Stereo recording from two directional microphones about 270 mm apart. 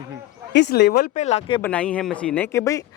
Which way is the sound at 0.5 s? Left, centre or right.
Left.